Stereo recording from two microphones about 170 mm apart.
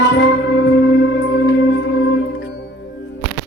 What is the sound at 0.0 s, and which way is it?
Music, 75° left (ahead or behind).